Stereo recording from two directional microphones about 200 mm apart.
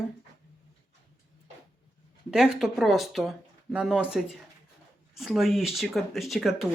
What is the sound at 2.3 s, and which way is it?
Speech, centre (ahead or behind).